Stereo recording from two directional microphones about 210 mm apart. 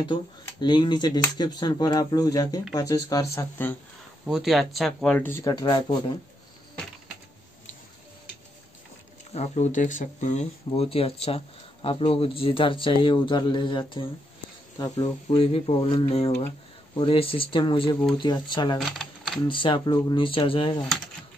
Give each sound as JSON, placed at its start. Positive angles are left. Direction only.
{"t": 0.0, "sound": "speech", "side_deg": 20}
{"t": 4.3, "sound": "speech", "side_deg": 0}
{"t": 9.3, "sound": "speech", "side_deg": 35}
{"t": 18.8, "sound": "typewriter", "side_deg": 0}
{"t": 19.4, "sound": "speech", "side_deg": 25}